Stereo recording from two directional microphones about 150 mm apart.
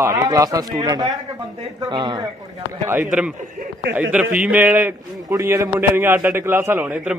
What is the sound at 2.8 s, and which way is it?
A man's voice, 15° right (ahead or behind).